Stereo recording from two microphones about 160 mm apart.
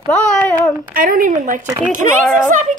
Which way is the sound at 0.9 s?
60° right (ahead or behind).